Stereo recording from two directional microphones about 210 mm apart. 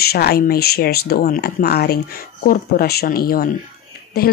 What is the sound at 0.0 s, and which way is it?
Speech, 50° left (ahead or behind).